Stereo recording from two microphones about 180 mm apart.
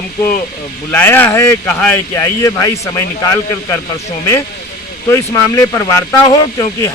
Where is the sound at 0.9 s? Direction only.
10° left (ahead or behind).